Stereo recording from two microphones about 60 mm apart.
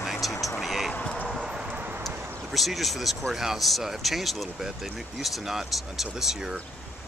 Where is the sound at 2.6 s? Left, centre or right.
Centre.